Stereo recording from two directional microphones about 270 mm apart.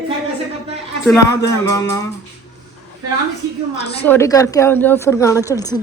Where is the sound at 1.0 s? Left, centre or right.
Centre.